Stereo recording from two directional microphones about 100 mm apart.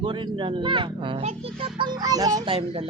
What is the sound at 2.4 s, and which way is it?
Speech, 65° right (ahead or behind).